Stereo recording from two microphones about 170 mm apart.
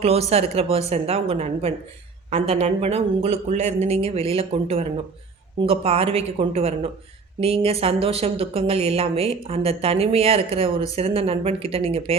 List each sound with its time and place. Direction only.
0.0 s speech: 40° right (ahead or behind)